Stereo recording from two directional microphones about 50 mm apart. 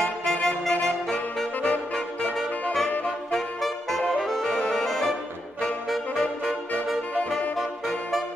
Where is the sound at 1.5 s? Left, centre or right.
Left.